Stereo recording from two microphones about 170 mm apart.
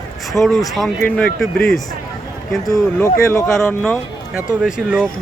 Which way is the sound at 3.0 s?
20° left (ahead or behind).